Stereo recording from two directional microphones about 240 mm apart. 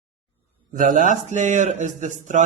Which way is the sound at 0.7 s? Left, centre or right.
Right.